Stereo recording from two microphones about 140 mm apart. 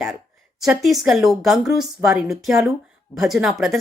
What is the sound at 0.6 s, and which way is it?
A woman's voice, centre (ahead or behind).